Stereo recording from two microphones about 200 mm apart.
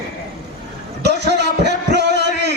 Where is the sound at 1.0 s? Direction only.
55° right (ahead or behind).